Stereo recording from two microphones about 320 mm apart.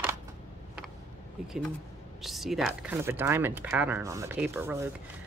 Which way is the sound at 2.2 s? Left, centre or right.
Centre.